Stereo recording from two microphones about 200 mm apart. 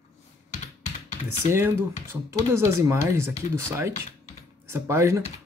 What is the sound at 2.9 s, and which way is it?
Speech, 15° right (ahead or behind).